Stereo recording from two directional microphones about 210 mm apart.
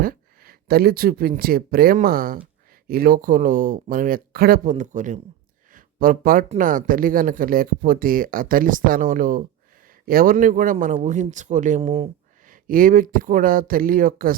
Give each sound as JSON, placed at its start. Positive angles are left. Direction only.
{"t": 0.0, "sound": "speech", "side_deg": -45}
{"t": 12.5, "sound": "speech", "side_deg": -40}